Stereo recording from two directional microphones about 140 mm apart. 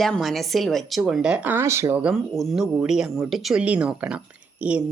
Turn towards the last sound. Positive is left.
turn(degrees=-10)  # may be behind; listen again after turning